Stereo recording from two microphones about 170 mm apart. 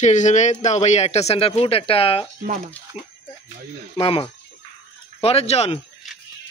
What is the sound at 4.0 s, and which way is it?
A man's voice, 35° left (ahead or behind).